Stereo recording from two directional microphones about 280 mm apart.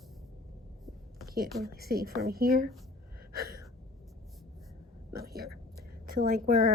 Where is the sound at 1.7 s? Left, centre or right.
Right.